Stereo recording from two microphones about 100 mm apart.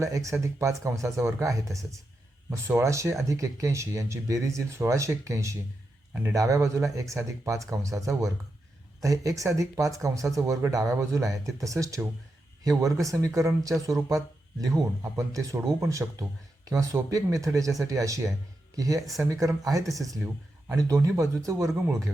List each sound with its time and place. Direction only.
0.0 s speech: 30° right (ahead or behind)
16.0 s speech: 25° right (ahead or behind)
16.6 s speech: 35° right (ahead or behind)
18.9 s speech: centre (ahead or behind)
19.2 s speech: 30° right (ahead or behind)